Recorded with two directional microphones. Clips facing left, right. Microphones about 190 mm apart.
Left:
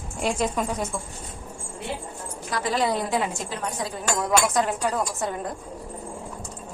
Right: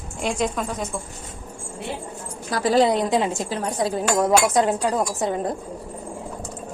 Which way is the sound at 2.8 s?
20° right (ahead or behind).